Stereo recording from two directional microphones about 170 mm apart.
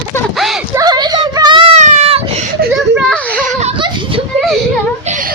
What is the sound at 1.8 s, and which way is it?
Baby cry, 40° right (ahead or behind).